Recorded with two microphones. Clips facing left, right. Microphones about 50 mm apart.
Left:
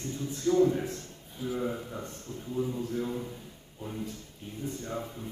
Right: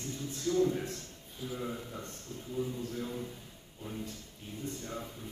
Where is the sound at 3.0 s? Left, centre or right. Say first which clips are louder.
Left 5 dB; centre.